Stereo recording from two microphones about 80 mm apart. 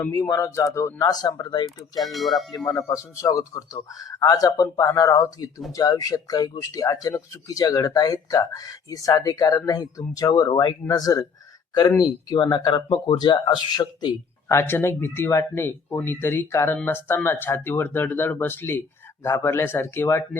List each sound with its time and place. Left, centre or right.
0.1 s speech: left
0.9 s speech: left
2.0 s speech: centre
2.7 s speech: left
10.5 s speech: left
10.8 s speech: left
12.3 s speech: left
13.4 s speech: left
14.4 s speech: left